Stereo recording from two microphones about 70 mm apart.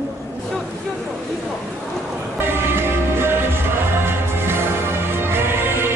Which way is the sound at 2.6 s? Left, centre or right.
Right.